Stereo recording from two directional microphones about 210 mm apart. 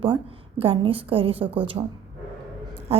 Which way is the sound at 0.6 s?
25° right (ahead or behind).